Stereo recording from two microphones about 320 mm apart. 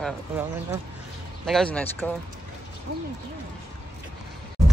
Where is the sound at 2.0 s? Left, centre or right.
Centre.